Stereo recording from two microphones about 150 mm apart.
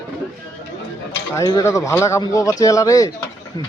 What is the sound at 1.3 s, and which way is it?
Speech, 25° left (ahead or behind).